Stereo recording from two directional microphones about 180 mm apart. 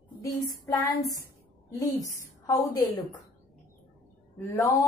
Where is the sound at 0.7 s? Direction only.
20° left (ahead or behind).